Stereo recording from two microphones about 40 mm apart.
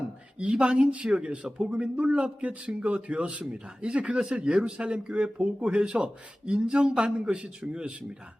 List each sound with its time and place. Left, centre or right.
0.3 s speech: right